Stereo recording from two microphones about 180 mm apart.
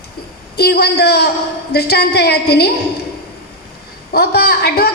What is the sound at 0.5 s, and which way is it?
A woman's voice, 60° left (ahead or behind).